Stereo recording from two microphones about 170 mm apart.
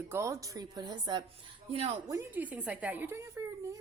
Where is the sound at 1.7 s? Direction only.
35° right (ahead or behind).